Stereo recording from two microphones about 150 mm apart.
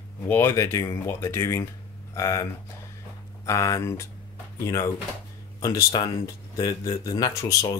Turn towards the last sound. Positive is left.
turn(degrees=20)  # may be behind; listen again after turning